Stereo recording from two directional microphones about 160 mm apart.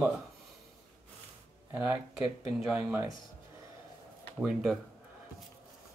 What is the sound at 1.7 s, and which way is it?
Speech, 15° right (ahead or behind).